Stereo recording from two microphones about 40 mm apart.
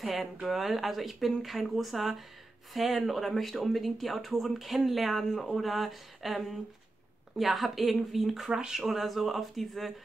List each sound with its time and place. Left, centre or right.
0.0 s speech: centre
8.5 s speech: centre
8.8 s speech: centre